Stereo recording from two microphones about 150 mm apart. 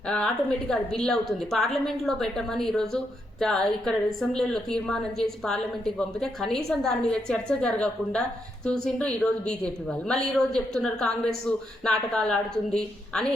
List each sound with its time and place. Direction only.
0.7 s a woman's voice: 5° left (ahead or behind)